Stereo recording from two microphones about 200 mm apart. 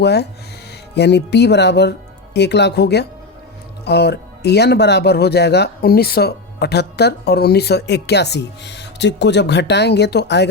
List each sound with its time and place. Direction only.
0.0 s speech: 55° left (ahead or behind)